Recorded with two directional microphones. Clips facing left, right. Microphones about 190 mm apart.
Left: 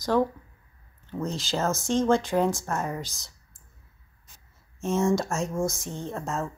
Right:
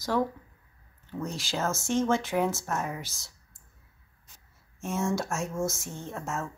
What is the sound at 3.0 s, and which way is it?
Speech, 15° left (ahead or behind).